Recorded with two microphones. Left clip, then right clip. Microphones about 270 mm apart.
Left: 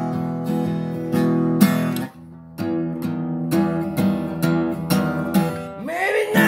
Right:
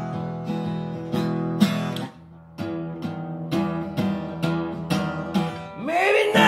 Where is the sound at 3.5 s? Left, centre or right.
Left.